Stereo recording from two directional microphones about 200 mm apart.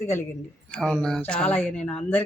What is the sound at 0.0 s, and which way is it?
Speech, 15° left (ahead or behind).